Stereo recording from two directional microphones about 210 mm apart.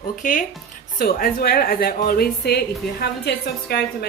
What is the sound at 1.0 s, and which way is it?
A woman's voice, 45° left (ahead or behind).